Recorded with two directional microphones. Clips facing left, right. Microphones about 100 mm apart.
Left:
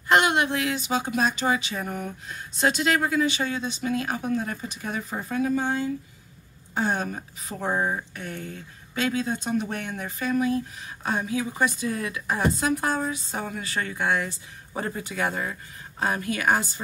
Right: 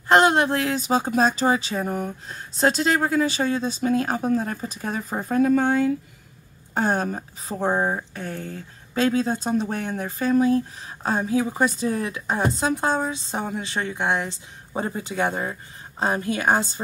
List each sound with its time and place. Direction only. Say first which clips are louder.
0.1 s speech: right 4 dB; 35° right (ahead or behind); by 5.9 s 60° right (ahead or behind)
6.7 s a woman's voice: right 3 dB; 45° right (ahead or behind)